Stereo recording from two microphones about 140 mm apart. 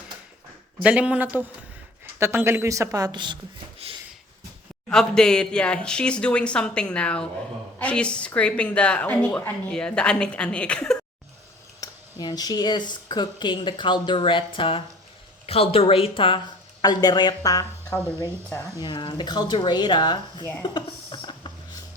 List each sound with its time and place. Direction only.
0.8 s a woman's voice: 10° right (ahead or behind); by 3.3 s 30° right (ahead or behind)
3.8 s a sound: 45° right (ahead or behind)
4.9 s speech: 5° left (ahead or behind)
11.8 s speech: 25° left (ahead or behind)
18.8 s speech: 35° left (ahead or behind)
20.7 s a sound: 35° left (ahead or behind)